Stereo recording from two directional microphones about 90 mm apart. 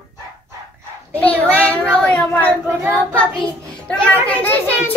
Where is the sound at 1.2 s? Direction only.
15° left (ahead or behind).